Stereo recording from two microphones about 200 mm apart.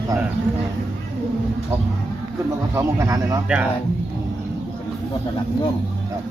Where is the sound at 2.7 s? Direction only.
15° right (ahead or behind).